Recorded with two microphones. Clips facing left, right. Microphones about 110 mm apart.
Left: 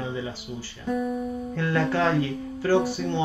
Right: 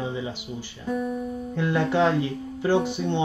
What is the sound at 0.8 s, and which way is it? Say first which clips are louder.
Guitar: left 1 dB; centre (ahead or behind).